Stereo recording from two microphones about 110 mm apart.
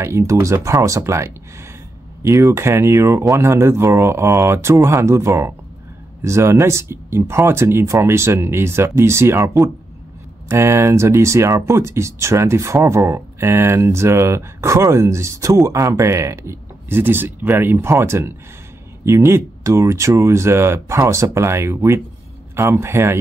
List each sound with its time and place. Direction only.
0.0 s speech: 25° right (ahead or behind)